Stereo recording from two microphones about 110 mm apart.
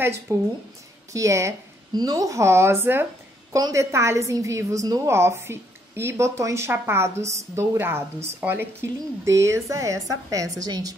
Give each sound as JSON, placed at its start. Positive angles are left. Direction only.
{"t": 0.3, "sound": "a woman's voice", "side_deg": -25}